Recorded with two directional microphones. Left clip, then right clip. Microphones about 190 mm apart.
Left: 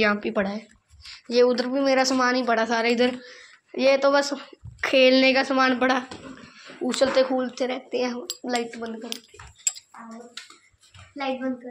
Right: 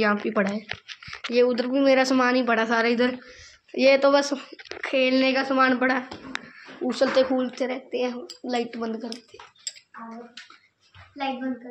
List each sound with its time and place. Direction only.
0.0 s a woman's voice: centre (ahead or behind)
0.3 s speech: 15° right (ahead or behind)
1.0 s speech: centre (ahead or behind)
1.8 s a woman's voice: 10° right (ahead or behind)
3.7 s speech: 10° right (ahead or behind)
4.8 s a woman's voice: 30° left (ahead or behind); by 6.0 s 15° left (ahead or behind)
6.8 s speech: 5° left (ahead or behind)
7.1 s speech: 10° right (ahead or behind)
7.3 s speech: 5° left (ahead or behind)
8.6 s speech: 20° right (ahead or behind)